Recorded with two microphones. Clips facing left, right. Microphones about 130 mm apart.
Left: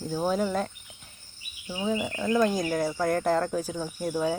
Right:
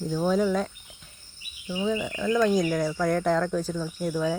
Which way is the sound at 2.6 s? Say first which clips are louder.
Right 1 dB; 20° left (ahead or behind).